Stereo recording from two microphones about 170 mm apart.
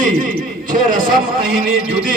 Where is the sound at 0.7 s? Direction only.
55° right (ahead or behind).